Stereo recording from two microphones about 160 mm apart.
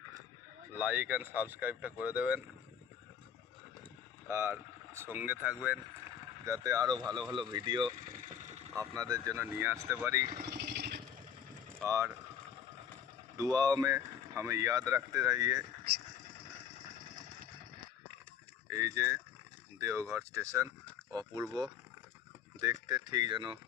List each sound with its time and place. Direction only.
0.8 s speech: 10° right (ahead or behind)
4.3 s speech: 15° right (ahead or behind)
6.4 s speech: 20° right (ahead or behind)
8.2 s a sound: 50° right (ahead or behind)
9.0 s speech: 20° right (ahead or behind)
10.3 s vehicle: 85° right
11.9 s speech: 20° right (ahead or behind)
13.3 s speech: 25° right (ahead or behind)
18.7 s speech: 20° right (ahead or behind)
22.6 s speech: 25° right (ahead or behind)